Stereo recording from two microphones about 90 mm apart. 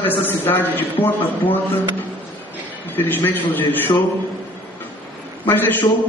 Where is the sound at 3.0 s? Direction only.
20° left (ahead or behind).